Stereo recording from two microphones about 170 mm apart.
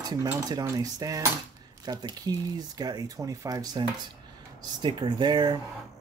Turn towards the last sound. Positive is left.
turn(degrees=-25)  # may be behind; listen again after turning